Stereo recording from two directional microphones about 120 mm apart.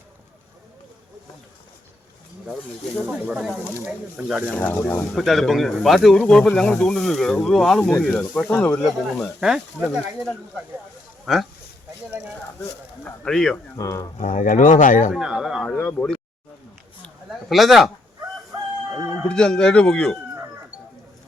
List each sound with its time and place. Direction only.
3.1 s speech: 5° right (ahead or behind)
4.5 s speech: 15° left (ahead or behind)
5.1 s speech: centre (ahead or behind)
11.3 s speech: centre (ahead or behind)
13.1 s speech: 5° left (ahead or behind)
13.7 s speech: 25° left (ahead or behind)
14.2 s speech: 90° left
15.1 s speech: 5° right (ahead or behind)
17.5 s speech: centre (ahead or behind)
18.9 s chicken: 25° right (ahead or behind)
19.2 s speech: 5° left (ahead or behind)